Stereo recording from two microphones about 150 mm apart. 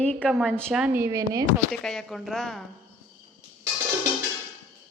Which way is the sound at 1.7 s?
Centre (ahead or behind).